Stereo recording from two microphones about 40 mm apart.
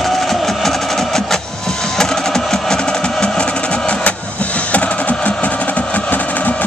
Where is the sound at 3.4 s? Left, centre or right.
Left.